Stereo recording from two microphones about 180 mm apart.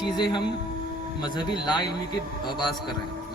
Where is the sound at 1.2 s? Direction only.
25° left (ahead or behind).